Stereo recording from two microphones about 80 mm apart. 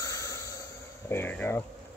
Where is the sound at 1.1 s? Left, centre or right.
Left.